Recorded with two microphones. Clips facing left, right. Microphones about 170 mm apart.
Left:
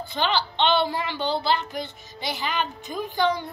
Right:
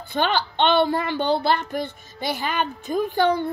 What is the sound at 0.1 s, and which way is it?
A woman's voice, 55° right (ahead or behind).